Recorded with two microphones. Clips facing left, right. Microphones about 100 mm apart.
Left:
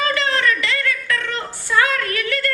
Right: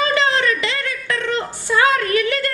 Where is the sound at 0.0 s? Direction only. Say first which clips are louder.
Right 2 dB; 20° right (ahead or behind).